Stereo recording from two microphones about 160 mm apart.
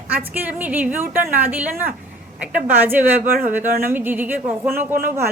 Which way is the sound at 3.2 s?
65° right (ahead or behind).